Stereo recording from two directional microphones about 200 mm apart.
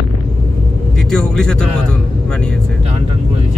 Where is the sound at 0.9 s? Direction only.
5° left (ahead or behind).